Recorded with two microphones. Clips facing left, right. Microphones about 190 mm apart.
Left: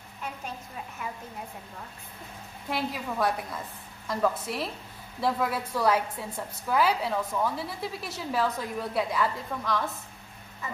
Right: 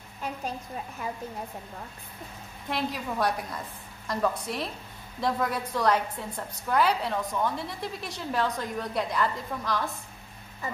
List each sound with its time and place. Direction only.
1.0 s a woman's voice: 35° right (ahead or behind)
2.7 s a woman's voice: centre (ahead or behind)
10.6 s frog: 35° right (ahead or behind)